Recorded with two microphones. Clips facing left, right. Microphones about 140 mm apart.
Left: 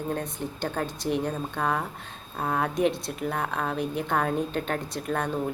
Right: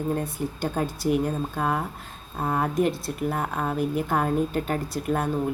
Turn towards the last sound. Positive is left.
turn(degrees=-5)  # may be behind; listen again after turning